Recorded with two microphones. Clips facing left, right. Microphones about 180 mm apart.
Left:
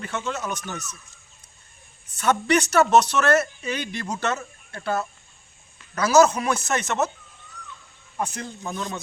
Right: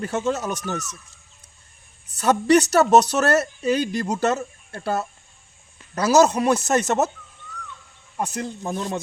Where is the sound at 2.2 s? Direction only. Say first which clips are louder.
Right 4 dB; 40° right (ahead or behind).